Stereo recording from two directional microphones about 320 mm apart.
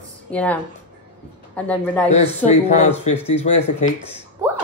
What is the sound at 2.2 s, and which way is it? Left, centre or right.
Speech, centre.